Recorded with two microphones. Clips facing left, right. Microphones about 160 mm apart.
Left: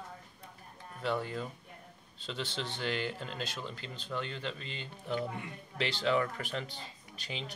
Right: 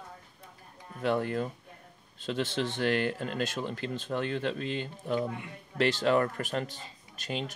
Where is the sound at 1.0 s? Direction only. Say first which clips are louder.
Right 6 dB; 55° right (ahead or behind).